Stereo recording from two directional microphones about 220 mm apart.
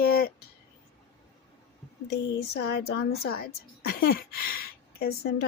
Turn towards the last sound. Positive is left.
turn(degrees=45)  # may be behind; listen again after turning